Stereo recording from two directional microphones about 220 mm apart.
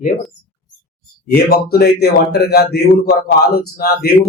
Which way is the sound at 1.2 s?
45° left (ahead or behind).